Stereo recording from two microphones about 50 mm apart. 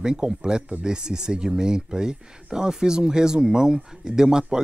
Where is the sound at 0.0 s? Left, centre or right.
Centre.